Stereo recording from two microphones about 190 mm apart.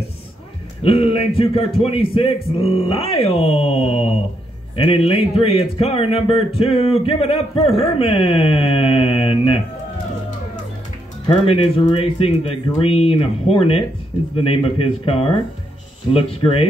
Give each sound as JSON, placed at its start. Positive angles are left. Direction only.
{"t": 0.8, "sound": "speech", "side_deg": 30}
{"t": 11.2, "sound": "speech", "side_deg": 30}